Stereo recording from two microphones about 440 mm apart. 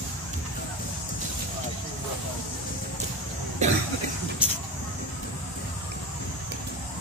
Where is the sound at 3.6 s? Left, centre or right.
Centre.